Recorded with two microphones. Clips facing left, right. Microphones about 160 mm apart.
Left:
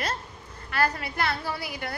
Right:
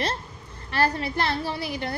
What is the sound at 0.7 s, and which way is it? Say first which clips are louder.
A woman's voice: right 3 dB; 30° right (ahead or behind).